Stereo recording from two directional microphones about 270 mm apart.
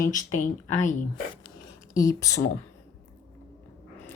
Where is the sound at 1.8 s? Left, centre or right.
Centre.